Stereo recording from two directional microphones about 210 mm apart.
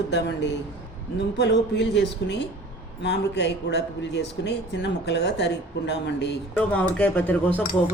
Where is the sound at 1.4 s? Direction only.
55° left (ahead or behind).